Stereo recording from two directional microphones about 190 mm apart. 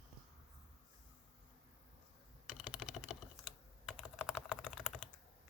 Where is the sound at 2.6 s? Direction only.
5° right (ahead or behind).